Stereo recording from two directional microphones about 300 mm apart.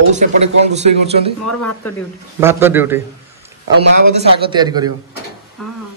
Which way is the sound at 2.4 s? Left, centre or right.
Centre.